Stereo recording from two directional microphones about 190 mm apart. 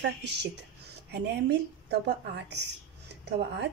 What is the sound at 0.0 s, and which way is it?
A woman's voice, 65° right (ahead or behind).